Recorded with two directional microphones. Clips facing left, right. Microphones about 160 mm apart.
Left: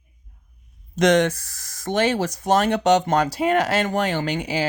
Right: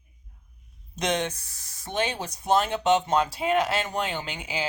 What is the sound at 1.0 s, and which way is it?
Speech, 85° left.